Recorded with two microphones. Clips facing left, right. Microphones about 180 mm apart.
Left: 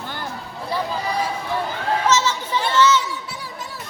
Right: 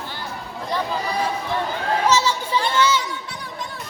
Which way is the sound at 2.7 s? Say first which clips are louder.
Left 4 dB; 10° right (ahead or behind).